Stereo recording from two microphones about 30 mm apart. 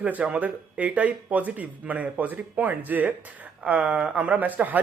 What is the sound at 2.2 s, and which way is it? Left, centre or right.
Speech, right.